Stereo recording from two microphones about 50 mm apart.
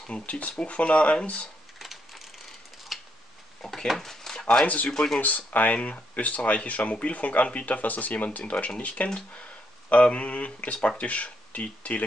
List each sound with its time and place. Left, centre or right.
0.1 s speech: left
2.9 s tick-tock: centre
3.6 s speech: centre
4.6 s speech: left